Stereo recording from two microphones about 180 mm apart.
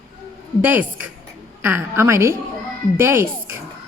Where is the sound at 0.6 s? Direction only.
10° right (ahead or behind).